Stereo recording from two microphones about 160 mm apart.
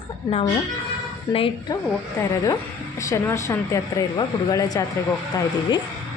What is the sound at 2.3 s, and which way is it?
Speech, 20° left (ahead or behind).